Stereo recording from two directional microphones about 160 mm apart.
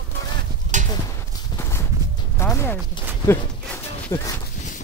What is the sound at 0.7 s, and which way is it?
Clip-clop, 50° right (ahead or behind).